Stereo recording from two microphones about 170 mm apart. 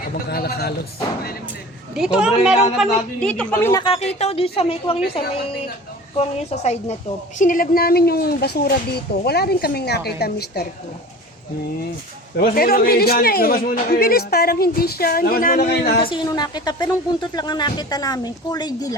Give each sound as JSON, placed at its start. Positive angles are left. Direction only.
{"t": 0.3, "sound": "speech", "side_deg": 65}
{"t": 2.0, "sound": "a woman's voice", "side_deg": -5}
{"t": 3.7, "sound": "speech", "side_deg": 25}
{"t": 3.9, "sound": "a woman's voice", "side_deg": 40}
{"t": 7.3, "sound": "speech", "side_deg": 50}
{"t": 12.4, "sound": "speech", "side_deg": 60}
{"t": 16.0, "sound": "speech", "side_deg": 25}